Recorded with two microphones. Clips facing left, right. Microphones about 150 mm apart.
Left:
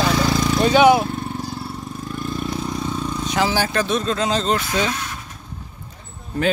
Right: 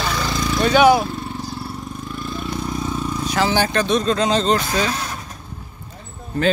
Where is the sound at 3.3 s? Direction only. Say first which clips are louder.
Right 2 dB; 10° left (ahead or behind).